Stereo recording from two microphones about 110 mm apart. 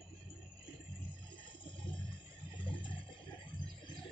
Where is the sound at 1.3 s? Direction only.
50° left (ahead or behind).